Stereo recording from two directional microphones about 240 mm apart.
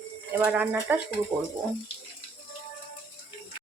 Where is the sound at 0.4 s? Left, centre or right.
Centre.